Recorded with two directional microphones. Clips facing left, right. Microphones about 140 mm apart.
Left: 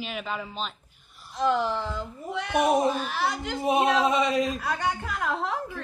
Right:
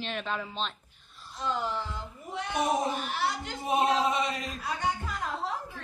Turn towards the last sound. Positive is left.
turn(degrees=80)